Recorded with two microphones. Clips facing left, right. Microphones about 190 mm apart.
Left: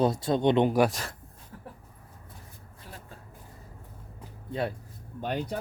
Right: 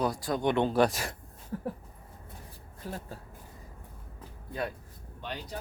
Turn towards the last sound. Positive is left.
turn(degrees=55)  # may be behind; listen again after turning